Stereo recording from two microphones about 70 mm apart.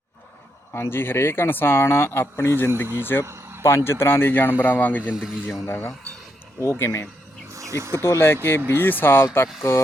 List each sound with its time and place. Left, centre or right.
0.7 s speech: left
3.2 s a sound: right
3.8 s speech: left
5.1 s speech: centre
5.6 s speech: left
7.5 s insect: right
8.0 s speech: left